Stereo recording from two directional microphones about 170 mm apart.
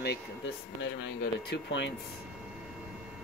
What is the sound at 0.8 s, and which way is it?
Speech, 90° left.